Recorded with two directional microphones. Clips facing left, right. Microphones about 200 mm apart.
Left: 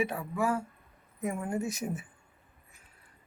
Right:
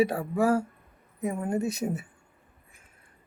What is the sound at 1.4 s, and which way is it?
Speech, 20° right (ahead or behind).